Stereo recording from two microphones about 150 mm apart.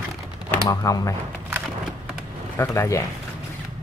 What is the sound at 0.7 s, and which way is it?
Speech, 25° left (ahead or behind).